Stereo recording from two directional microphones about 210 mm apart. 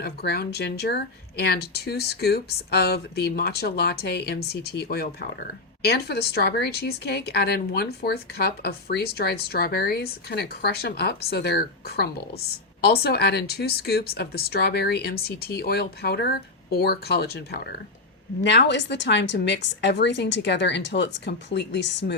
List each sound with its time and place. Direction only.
0.0 s a woman's voice: 50° left (ahead or behind)